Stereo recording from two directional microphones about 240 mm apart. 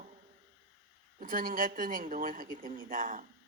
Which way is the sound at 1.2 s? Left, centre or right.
Right.